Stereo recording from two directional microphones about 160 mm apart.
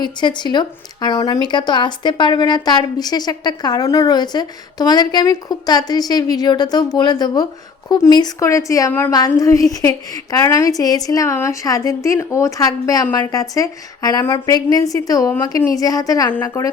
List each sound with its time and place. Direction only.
0.0 s a woman's voice: 30° left (ahead or behind)